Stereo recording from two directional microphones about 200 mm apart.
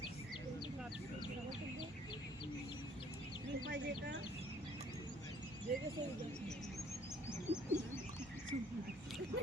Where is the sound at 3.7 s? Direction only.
60° right (ahead or behind).